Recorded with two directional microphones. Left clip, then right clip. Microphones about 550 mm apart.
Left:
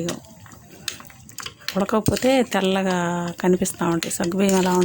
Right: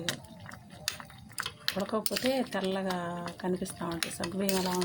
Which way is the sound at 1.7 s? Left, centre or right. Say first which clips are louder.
Left 8 dB; right.